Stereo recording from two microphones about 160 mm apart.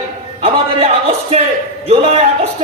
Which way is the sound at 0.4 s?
40° right (ahead or behind).